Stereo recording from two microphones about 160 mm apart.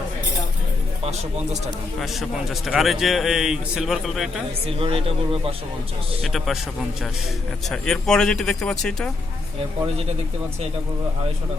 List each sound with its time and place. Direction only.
2.0 s a man's voice: centre (ahead or behind)
4.6 s speech: 35° right (ahead or behind)
6.2 s a man's voice: centre (ahead or behind)
7.7 s a man's voice: 5° left (ahead or behind)